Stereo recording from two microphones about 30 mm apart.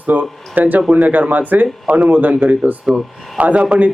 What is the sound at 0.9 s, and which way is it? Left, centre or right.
Speech, right.